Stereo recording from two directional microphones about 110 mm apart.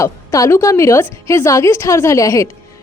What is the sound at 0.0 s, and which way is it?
A woman's voice, 30° left (ahead or behind).